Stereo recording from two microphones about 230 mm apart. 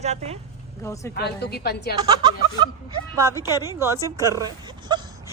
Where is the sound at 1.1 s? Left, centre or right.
Left.